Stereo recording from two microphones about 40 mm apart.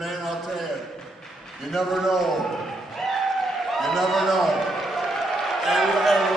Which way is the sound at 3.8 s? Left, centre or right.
Centre.